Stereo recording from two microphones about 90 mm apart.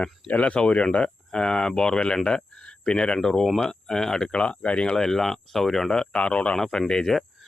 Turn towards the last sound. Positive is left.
turn(degrees=5)  # may be behind; listen again after turning